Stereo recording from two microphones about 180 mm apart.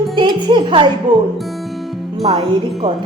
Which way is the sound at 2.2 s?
35° right (ahead or behind).